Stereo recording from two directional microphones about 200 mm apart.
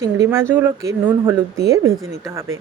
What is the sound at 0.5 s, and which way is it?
Speech, 10° right (ahead or behind).